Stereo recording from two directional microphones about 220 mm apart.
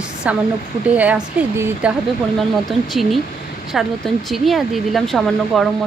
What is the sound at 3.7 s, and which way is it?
Speech, centre (ahead or behind).